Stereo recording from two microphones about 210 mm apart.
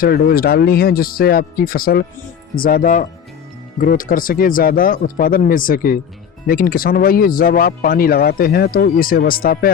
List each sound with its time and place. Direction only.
0.0 s speech: 45° left (ahead or behind)